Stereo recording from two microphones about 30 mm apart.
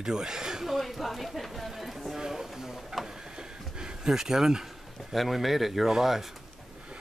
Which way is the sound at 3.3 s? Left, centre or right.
Right.